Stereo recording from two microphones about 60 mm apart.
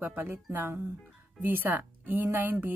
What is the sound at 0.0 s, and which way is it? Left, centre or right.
Speech, right.